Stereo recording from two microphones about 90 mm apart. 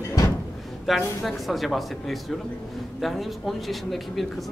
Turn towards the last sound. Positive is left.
turn(degrees=0)  # may be behind; listen again after turning